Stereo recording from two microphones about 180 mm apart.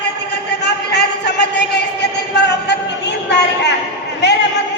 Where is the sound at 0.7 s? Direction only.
70° left (ahead or behind).